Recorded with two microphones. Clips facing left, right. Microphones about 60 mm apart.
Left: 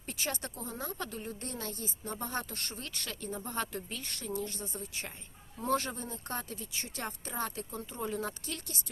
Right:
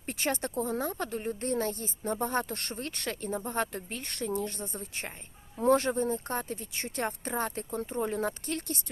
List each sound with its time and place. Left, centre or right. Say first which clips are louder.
0.0 s speech: right 6 dB; right